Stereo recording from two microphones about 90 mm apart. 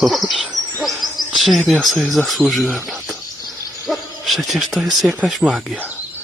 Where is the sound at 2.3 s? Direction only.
Centre (ahead or behind).